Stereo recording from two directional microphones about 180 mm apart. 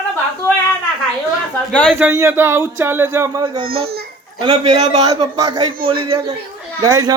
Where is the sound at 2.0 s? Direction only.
10° right (ahead or behind).